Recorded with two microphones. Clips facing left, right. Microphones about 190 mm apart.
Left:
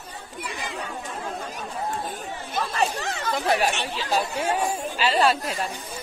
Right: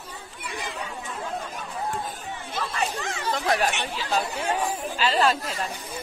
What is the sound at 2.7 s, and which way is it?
Chatter, 35° left (ahead or behind).